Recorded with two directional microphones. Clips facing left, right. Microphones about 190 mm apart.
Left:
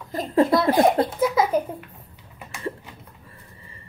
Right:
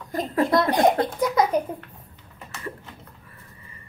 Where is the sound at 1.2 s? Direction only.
5° left (ahead or behind).